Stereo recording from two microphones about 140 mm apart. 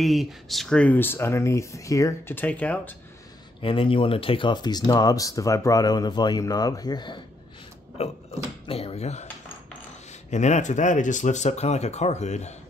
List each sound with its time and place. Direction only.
0.0 s speech: centre (ahead or behind)
3.6 s speech: 40° left (ahead or behind)
8.0 s speech: 45° left (ahead or behind)
10.3 s speech: 60° left (ahead or behind)